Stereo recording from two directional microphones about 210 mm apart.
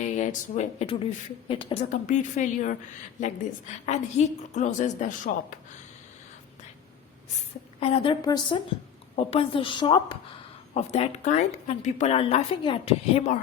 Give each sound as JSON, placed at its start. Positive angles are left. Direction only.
{"t": 0.0, "sound": "speech", "side_deg": 35}
{"t": 3.8, "sound": "speech", "side_deg": 35}
{"t": 7.8, "sound": "a woman's voice", "side_deg": 25}